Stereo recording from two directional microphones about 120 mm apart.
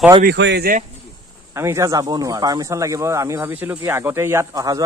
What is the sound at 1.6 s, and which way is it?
Speech, 25° right (ahead or behind).